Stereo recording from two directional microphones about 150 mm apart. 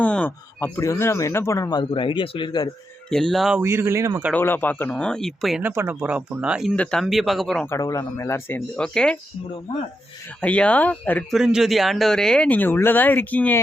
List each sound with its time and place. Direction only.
0.0 s speech: 10° left (ahead or behind)
1.8 s a man's voice: 35° left (ahead or behind)
3.1 s speech: 5° left (ahead or behind)
3.6 s speech: 15° right (ahead or behind)
4.3 s speech: 15° left (ahead or behind)
5.6 s speech: 15° right (ahead or behind); by 7.7 s 5° left (ahead or behind)
7.7 s speech: 20° left (ahead or behind)
8.7 s speech: 5° left (ahead or behind)
10.4 s speech: 10° left (ahead or behind)
11.3 s speech: 5° right (ahead or behind)